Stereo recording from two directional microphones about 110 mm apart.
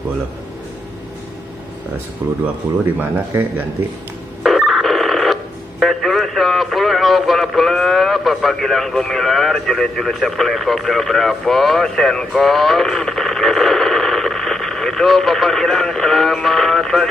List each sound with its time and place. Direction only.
2.2 s speech: 15° right (ahead or behind)
4.4 s telephone bell ringing: centre (ahead or behind)